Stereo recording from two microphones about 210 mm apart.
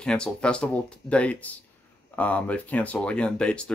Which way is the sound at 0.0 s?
5° left (ahead or behind).